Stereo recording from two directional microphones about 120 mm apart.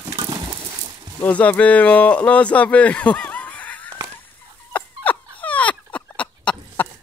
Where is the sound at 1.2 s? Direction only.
10° left (ahead or behind).